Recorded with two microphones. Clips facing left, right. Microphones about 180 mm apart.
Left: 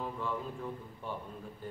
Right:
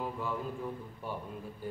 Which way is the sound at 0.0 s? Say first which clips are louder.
Right 1 dB; 5° right (ahead or behind).